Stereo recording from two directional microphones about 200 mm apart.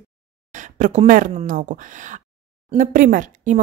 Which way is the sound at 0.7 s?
40° right (ahead or behind).